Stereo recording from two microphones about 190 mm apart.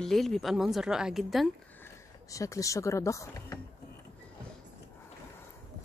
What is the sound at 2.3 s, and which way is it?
Speech, 15° left (ahead or behind).